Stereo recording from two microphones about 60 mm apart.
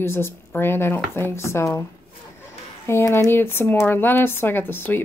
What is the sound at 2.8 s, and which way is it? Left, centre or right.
Speech, left.